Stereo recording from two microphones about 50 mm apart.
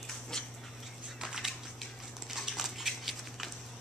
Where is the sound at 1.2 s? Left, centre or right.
Centre.